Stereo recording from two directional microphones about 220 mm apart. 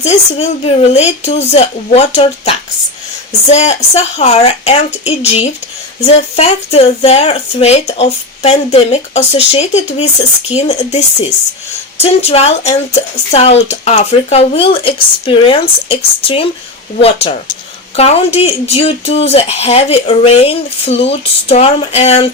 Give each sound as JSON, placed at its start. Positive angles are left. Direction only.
{"t": 0.0, "sound": "speech", "side_deg": 30}